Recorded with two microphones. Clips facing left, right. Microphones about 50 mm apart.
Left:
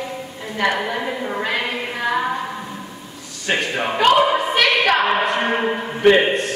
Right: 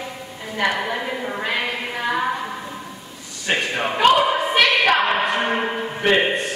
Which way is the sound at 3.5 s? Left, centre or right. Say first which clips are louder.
Left 1 dB; centre.